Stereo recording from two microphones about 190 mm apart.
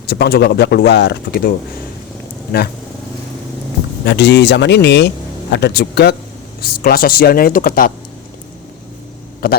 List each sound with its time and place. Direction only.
0.1 s a man's voice: 55° left (ahead or behind)
4.0 s a man's voice: 65° left (ahead or behind); by 7.9 s 45° left (ahead or behind)